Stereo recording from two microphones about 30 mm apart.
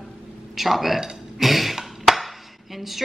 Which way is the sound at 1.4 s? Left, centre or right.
Centre.